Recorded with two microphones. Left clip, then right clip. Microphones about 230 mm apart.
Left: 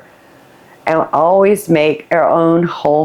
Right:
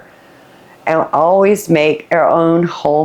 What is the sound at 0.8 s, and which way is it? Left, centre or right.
Speech, left.